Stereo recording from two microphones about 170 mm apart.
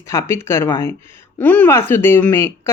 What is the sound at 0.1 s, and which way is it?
Speech, 15° left (ahead or behind).